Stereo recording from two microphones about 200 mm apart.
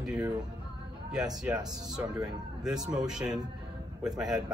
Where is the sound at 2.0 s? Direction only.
10° right (ahead or behind).